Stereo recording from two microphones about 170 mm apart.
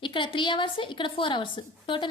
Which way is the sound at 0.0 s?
30° left (ahead or behind).